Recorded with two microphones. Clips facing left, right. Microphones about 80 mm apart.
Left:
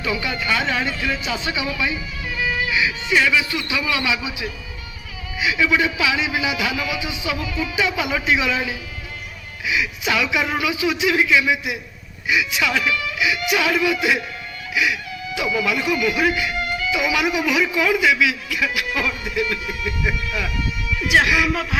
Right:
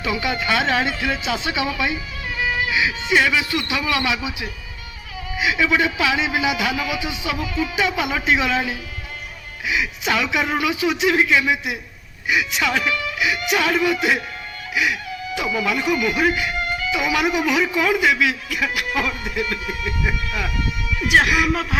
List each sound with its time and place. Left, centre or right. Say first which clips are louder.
0.0 s speech: right 1 dB; centre
0.6 s speech: right 3 dB; right
0.9 s speech: right 1 dB; centre
2.3 s music: right 1 dB; right
3.1 s a man's voice: even; right
5.4 s a man's voice: even; right
15.4 s speech: left 1 dB; right